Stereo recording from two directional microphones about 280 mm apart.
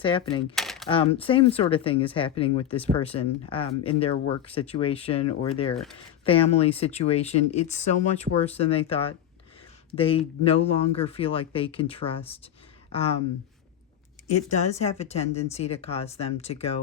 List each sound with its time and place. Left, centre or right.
0.0 s speech: centre
0.5 s typewriter: centre
0.9 s speech: centre
14.3 s speech: left